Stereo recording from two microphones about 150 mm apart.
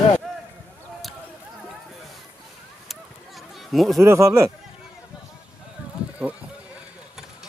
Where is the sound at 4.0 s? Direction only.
20° right (ahead or behind).